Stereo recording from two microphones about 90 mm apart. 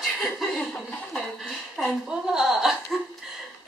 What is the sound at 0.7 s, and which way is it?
Speech, 15° left (ahead or behind).